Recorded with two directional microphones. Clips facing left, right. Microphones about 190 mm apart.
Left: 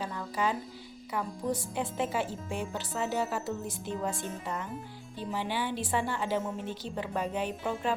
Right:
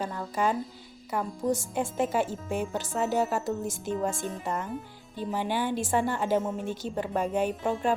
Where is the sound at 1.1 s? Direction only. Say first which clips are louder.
Right 4 dB; 45° right (ahead or behind).